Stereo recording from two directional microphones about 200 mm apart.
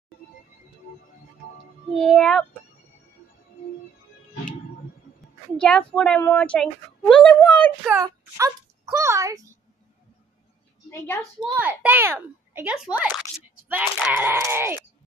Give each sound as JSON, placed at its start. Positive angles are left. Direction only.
{"t": 2.0, "sound": "speech", "side_deg": 0}
{"t": 5.6, "sound": "speech", "side_deg": 5}
{"t": 7.9, "sound": "a child's voice", "side_deg": -15}
{"t": 10.9, "sound": "a woman's voice", "side_deg": 10}
{"t": 11.5, "sound": "a child's voice", "side_deg": -10}